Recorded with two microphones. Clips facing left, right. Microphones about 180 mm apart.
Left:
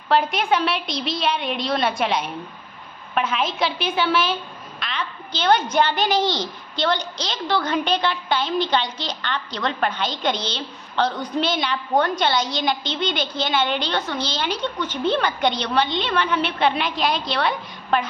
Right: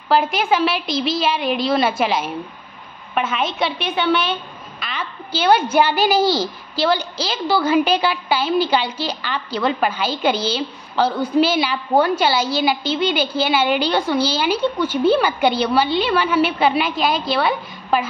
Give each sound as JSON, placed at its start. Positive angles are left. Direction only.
{"t": 0.1, "sound": "a woman's voice", "side_deg": 0}